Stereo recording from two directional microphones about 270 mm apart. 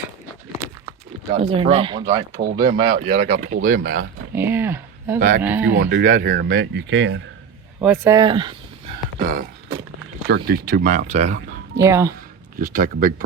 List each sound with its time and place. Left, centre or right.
1.5 s speech: right
2.4 s speech: right
4.4 s speech: centre
5.7 s speech: right
7.8 s speech: centre
9.1 s speech: right
11.8 s speech: centre
12.5 s speech: right